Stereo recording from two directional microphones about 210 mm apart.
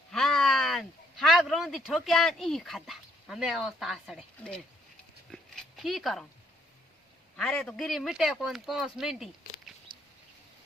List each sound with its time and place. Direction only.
0.1 s speech: 5° left (ahead or behind)
5.3 s dog: centre (ahead or behind)
7.3 s speech: centre (ahead or behind)